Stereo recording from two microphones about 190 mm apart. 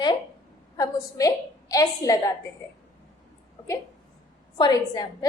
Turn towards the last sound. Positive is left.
turn(degrees=20)  # may be behind; listen again after turning